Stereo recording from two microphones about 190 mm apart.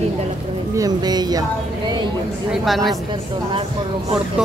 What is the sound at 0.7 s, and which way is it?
Speech, 20° right (ahead or behind).